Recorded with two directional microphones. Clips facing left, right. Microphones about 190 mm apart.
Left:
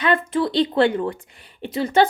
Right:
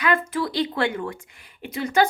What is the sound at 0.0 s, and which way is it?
Speech, 25° left (ahead or behind).